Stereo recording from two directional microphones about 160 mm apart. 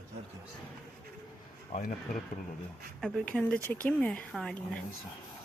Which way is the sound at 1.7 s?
45° left (ahead or behind).